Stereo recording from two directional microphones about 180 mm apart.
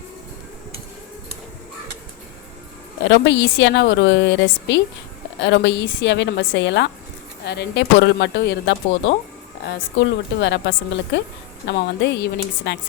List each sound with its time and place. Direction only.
3.0 s a woman's voice: 80° left
7.4 s a woman's voice: 70° left (ahead or behind)